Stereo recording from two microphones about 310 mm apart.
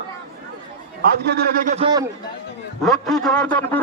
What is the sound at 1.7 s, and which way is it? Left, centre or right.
Speech, centre.